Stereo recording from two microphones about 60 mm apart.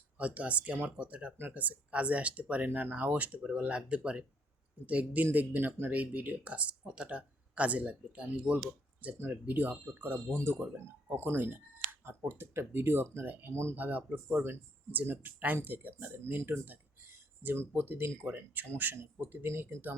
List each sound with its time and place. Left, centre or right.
0.2 s speech: right